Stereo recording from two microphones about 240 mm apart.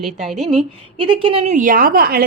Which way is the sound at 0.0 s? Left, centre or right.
Centre.